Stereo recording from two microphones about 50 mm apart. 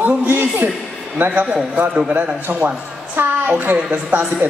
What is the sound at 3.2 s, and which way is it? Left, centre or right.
Speech, right.